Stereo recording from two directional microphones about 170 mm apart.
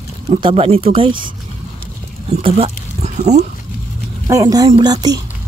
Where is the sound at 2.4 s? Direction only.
40° right (ahead or behind).